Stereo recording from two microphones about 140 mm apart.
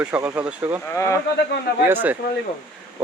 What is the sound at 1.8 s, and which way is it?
Speech, 15° right (ahead or behind).